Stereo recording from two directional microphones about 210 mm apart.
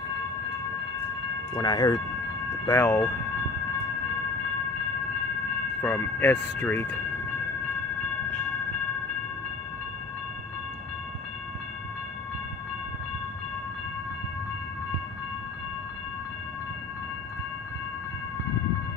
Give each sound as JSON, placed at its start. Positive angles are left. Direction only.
{"t": 1.5, "sound": "speech", "side_deg": 20}
{"t": 5.8, "sound": "speech", "side_deg": 10}